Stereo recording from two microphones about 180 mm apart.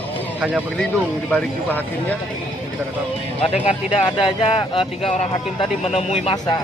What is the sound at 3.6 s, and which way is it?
Speech, 35° left (ahead or behind).